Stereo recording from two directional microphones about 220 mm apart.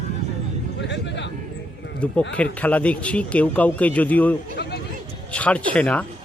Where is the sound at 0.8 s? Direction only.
55° left (ahead or behind).